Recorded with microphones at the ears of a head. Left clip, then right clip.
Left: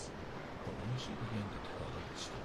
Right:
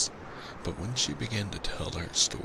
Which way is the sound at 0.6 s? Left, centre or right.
Right.